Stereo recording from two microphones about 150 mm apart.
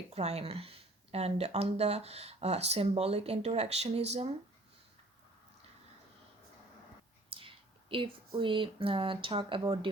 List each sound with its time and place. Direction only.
0.1 s speech: 45° right (ahead or behind)
7.3 s a sound: 35° right (ahead or behind)
8.4 s speech: 35° right (ahead or behind)